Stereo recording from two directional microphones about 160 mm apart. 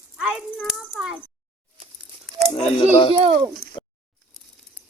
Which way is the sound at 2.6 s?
40° left (ahead or behind).